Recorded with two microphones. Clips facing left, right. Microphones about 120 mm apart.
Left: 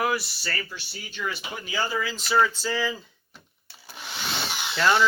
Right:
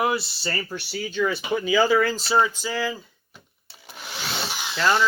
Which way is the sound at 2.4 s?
15° right (ahead or behind).